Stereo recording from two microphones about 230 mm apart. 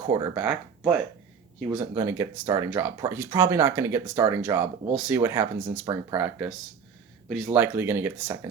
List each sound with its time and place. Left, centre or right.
0.0 s speech: centre
0.3 s speech: centre
7.4 s speech: centre